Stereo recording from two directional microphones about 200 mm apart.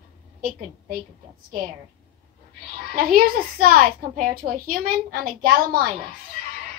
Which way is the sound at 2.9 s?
45° right (ahead or behind).